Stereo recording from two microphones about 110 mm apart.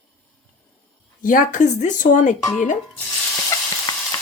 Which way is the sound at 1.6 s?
90° left.